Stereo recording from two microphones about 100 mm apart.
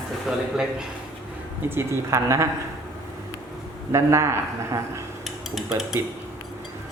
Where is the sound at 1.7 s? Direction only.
25° right (ahead or behind).